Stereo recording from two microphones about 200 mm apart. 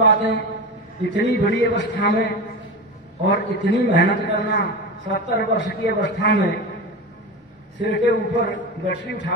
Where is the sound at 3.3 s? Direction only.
60° left (ahead or behind).